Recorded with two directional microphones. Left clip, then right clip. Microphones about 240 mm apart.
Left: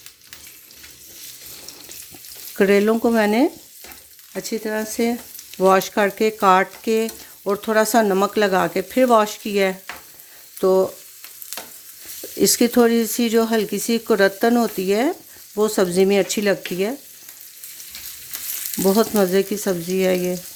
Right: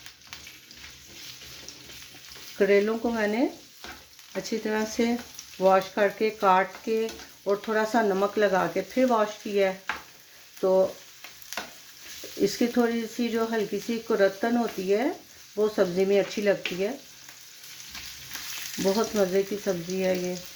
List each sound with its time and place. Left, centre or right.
2.6 s frying: left
4.4 s speech: left
5.5 s frying: left
12.4 s frying: left
18.8 s frying: left